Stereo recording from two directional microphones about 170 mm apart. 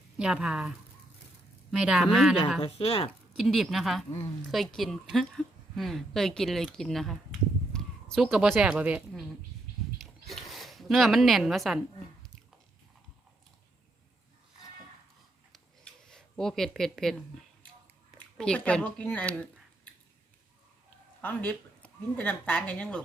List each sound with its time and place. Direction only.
0.2 s speech: 5° right (ahead or behind)
1.7 s speech: 5° right (ahead or behind)
2.6 s a woman's voice: 35° left (ahead or behind)
3.3 s a woman's voice: centre (ahead or behind)
10.0 s a sound: centre (ahead or behind)
15.5 s a sound: 5° left (ahead or behind)
18.2 s speech: 5° left (ahead or behind)
21.2 s speech: 10° left (ahead or behind)